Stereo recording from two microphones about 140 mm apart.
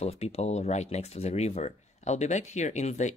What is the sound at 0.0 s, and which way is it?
Speech, 50° left (ahead or behind).